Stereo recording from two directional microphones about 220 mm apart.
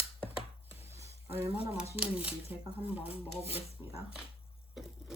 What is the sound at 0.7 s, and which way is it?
Sizzle, 10° right (ahead or behind).